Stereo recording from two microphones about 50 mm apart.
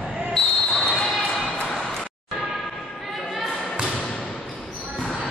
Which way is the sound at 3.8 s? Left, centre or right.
Centre.